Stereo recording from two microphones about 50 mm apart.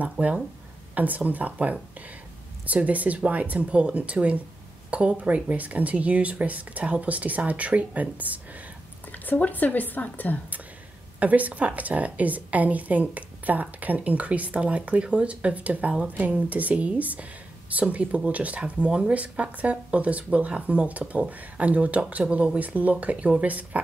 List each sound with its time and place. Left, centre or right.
0.0 s a woman's voice: right
9.2 s speech: left
11.1 s a woman's voice: right